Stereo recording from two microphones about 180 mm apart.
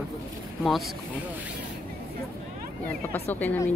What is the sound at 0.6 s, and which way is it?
Speech, centre (ahead or behind).